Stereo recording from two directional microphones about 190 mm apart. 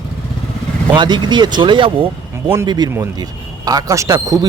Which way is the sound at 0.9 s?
25° right (ahead or behind).